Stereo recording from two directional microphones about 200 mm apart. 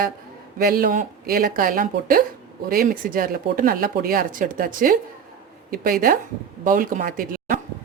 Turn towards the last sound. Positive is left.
turn(degrees=-45)  # may be behind; listen again after turning